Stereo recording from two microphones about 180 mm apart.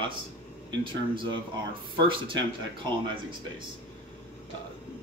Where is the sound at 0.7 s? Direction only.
25° right (ahead or behind).